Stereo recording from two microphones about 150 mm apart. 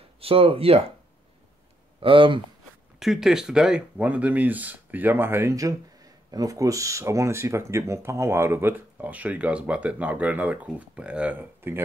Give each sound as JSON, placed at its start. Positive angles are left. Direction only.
{"t": 0.2, "sound": "speech", "side_deg": -40}
{"t": 2.0, "sound": "speech", "side_deg": -35}
{"t": 3.0, "sound": "speech", "side_deg": 0}